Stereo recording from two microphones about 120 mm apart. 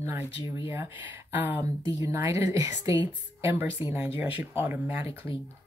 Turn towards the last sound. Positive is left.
turn(degrees=-15)  # may be behind; listen again after turning